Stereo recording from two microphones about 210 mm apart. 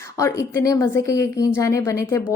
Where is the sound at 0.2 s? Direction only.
15° left (ahead or behind).